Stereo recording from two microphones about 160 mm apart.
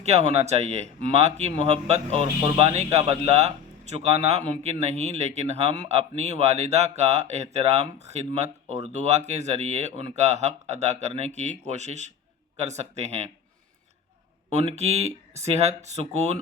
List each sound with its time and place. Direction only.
0.0 s a man's voice: 40° right (ahead or behind)
14.5 s speech: 40° right (ahead or behind)